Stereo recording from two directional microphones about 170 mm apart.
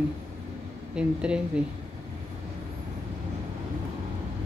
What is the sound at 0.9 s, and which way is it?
Speech, 5° right (ahead or behind).